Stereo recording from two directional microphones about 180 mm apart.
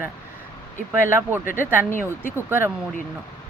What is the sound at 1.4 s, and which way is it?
Speech, 50° left (ahead or behind).